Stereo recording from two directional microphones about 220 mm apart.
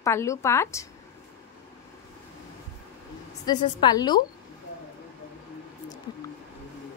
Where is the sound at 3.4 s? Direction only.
20° left (ahead or behind).